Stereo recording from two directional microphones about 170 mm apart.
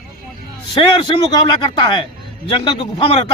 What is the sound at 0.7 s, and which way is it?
A man's voice, 30° left (ahead or behind).